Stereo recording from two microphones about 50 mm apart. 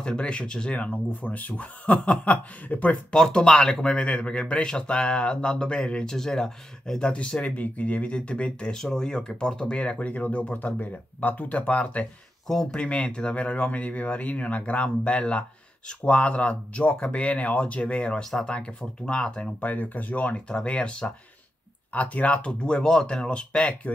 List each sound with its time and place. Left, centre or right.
0.0 s speech: left
3.2 s speech: centre
7.5 s speech: left
11.5 s speech: left
19.6 s speech: left